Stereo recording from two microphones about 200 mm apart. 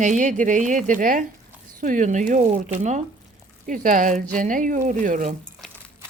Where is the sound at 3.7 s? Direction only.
40° right (ahead or behind).